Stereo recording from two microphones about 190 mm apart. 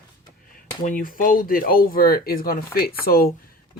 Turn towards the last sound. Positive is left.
turn(degrees=50)  # may be behind; listen again after turning